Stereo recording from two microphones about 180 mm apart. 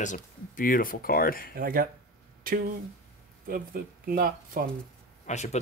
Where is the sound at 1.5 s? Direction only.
55° right (ahead or behind).